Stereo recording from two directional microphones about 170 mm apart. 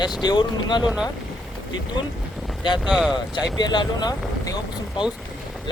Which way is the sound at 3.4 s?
25° left (ahead or behind).